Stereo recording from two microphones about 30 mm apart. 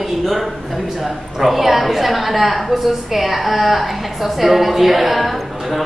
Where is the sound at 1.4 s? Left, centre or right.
Centre.